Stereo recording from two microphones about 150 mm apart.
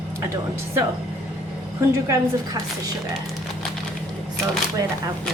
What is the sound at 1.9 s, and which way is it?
A woman's voice, 20° right (ahead or behind).